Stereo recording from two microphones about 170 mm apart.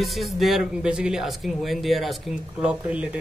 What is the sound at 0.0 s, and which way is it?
Speech, centre (ahead or behind).